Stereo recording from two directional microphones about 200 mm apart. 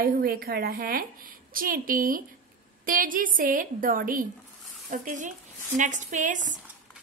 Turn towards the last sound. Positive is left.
turn(degrees=-40)  # may be behind; listen again after turning